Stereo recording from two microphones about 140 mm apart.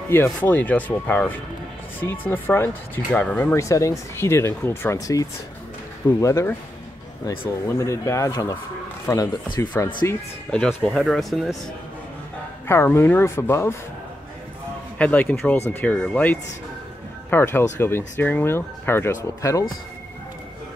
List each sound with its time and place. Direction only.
0.1 s speech: 15° left (ahead or behind)
3.5 s speech: 20° left (ahead or behind)
10.5 s speech: centre (ahead or behind)
12.6 s speech: 15° left (ahead or behind)
15.0 s speech: 10° left (ahead or behind)